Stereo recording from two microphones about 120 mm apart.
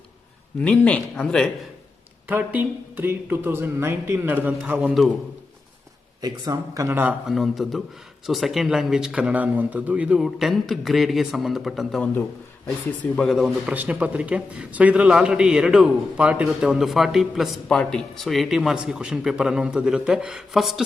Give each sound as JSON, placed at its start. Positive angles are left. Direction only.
{"t": 0.6, "sound": "speech", "side_deg": 10}
{"t": 2.9, "sound": "a man's voice", "side_deg": -15}
{"t": 6.2, "sound": "speech", "side_deg": -30}
{"t": 7.3, "sound": "a man's voice", "side_deg": 0}
{"t": 13.1, "sound": "a man's voice", "side_deg": 0}
{"t": 13.7, "sound": "a man's voice", "side_deg": -15}